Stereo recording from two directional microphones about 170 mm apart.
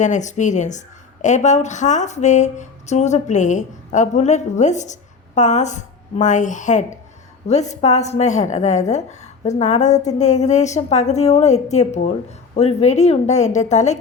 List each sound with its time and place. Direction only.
0.0 s a woman's voice: 45° left (ahead or behind)